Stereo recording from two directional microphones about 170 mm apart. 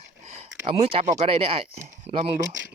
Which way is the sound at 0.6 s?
35° right (ahead or behind).